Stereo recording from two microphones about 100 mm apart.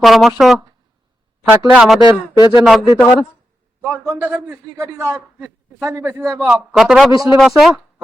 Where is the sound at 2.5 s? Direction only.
5° right (ahead or behind).